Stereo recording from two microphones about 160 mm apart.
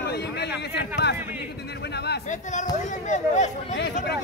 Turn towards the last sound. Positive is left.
turn(degrees=50)  # may be behind; listen again after turning